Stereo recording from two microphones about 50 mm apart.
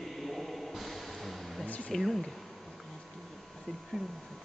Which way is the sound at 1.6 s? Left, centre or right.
Left.